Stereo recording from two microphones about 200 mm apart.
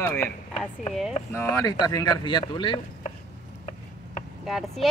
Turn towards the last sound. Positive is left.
turn(degrees=0)  # may be behind; listen again after turning